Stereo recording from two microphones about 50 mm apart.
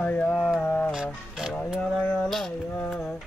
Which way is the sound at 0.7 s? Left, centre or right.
Left.